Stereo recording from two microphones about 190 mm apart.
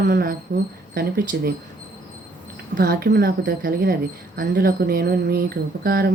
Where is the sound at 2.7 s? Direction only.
50° right (ahead or behind).